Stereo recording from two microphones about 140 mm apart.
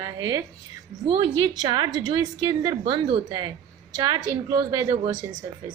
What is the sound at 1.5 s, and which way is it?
A woman's voice, 30° right (ahead or behind).